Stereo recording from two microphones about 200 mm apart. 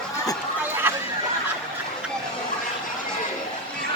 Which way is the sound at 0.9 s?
10° right (ahead or behind).